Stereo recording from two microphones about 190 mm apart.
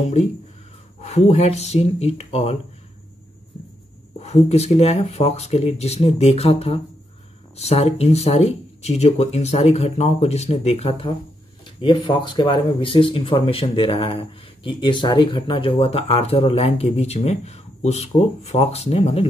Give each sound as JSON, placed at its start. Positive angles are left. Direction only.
{"t": 1.0, "sound": "speech", "side_deg": 35}
{"t": 4.2, "sound": "speech", "side_deg": 35}